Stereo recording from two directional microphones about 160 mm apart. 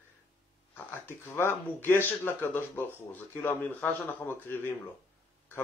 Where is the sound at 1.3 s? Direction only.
15° left (ahead or behind).